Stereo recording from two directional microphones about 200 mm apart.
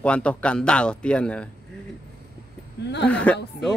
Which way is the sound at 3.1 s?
5° left (ahead or behind).